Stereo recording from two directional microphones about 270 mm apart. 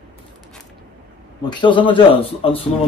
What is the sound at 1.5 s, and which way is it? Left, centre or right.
A man's voice, centre.